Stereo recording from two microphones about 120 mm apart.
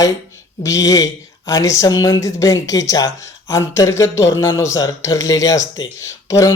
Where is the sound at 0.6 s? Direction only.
30° left (ahead or behind).